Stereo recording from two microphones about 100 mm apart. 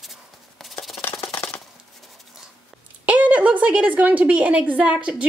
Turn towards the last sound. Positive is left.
turn(degrees=-10)  # may be behind; listen again after turning